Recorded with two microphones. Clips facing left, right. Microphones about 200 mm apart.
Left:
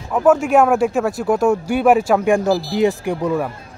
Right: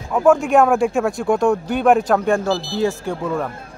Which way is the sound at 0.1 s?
5° left (ahead or behind).